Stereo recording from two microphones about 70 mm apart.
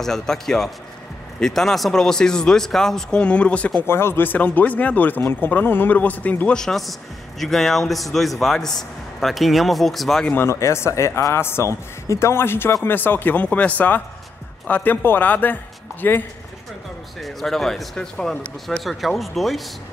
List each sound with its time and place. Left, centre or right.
0.0 s speech: centre
3.8 s speech: left
6.5 s a man's voice: centre
10.3 s speech: left
17.2 s a man's voice: centre
18.9 s a man's voice: centre